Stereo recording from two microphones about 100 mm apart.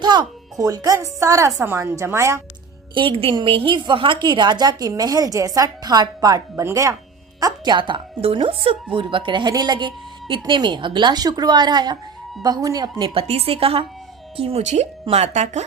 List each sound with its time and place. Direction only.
0.0 s speech: 50° right (ahead or behind)
0.6 s a woman's voice: 40° right (ahead or behind)
2.9 s a woman's voice: 60° right (ahead or behind); by 6.9 s 30° right (ahead or behind)
7.3 s a woman's voice: 40° right (ahead or behind)
13.1 s a woman's voice: 85° right
15.0 s speech: 90° right